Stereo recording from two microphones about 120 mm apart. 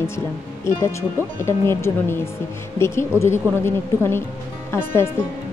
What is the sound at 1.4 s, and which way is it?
Speech, 20° left (ahead or behind).